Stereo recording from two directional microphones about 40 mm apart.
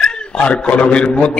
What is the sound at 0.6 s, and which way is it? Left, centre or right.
Speech, left.